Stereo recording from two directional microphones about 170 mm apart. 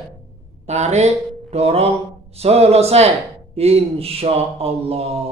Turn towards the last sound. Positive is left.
turn(degrees=-35)  # may be behind; listen again after turning